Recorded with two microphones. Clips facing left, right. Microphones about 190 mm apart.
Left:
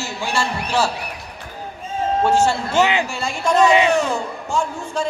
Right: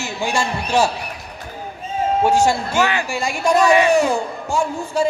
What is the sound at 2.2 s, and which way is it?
Speech, 10° right (ahead or behind).